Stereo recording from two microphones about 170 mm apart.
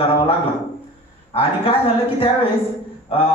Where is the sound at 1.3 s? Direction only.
35° left (ahead or behind).